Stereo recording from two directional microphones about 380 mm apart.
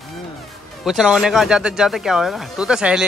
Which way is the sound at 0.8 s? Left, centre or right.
Centre.